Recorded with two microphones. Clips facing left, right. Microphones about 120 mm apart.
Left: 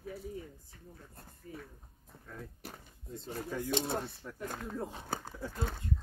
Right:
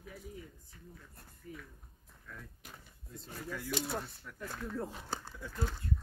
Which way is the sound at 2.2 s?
35° left (ahead or behind).